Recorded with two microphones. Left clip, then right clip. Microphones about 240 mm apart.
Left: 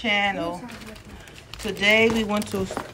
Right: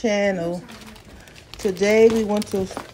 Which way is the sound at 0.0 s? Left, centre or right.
Right.